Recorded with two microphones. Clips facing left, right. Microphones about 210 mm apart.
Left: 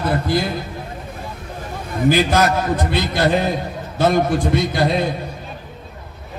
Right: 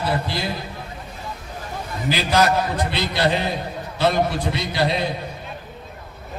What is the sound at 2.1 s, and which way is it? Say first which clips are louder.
A man's voice: left 2 dB; 50° left (ahead or behind).